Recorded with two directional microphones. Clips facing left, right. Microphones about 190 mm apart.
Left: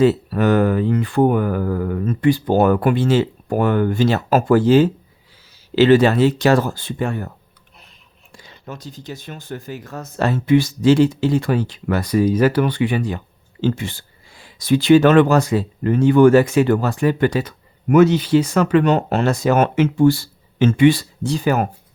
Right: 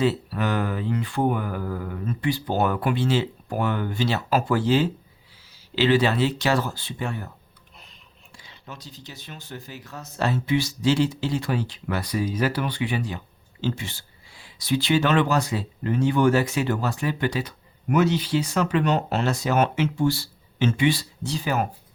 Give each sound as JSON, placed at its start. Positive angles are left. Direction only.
{"t": 0.0, "sound": "speech", "side_deg": 45}
{"t": 8.4, "sound": "speech", "side_deg": 45}